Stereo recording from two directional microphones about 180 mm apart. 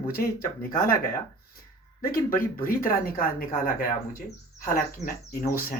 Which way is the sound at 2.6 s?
50° left (ahead or behind).